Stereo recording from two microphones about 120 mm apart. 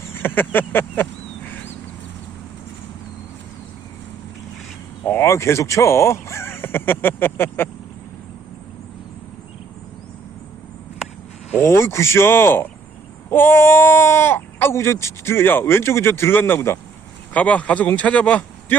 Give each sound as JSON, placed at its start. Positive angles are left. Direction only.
{"t": 0.1, "sound": "speech", "side_deg": 15}
{"t": 5.0, "sound": "speech", "side_deg": 20}
{"t": 11.5, "sound": "speech", "side_deg": 20}
{"t": 17.3, "sound": "speech", "side_deg": 10}